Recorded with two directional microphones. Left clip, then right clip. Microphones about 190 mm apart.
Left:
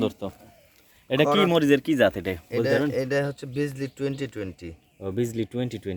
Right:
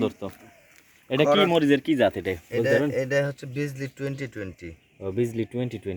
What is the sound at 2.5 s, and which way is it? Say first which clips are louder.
Speech: right 1 dB; 25° left (ahead or behind).